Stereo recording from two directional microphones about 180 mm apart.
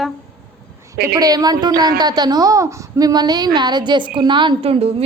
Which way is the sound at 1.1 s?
20° right (ahead or behind).